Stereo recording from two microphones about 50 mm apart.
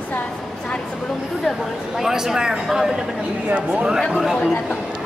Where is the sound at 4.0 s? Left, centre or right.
Centre.